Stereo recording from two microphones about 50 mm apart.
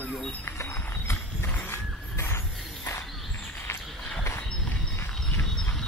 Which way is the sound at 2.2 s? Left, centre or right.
Left.